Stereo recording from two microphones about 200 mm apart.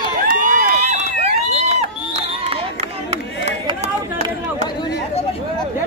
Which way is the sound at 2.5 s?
30° right (ahead or behind).